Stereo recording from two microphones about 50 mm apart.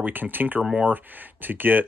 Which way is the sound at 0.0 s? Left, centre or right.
Right.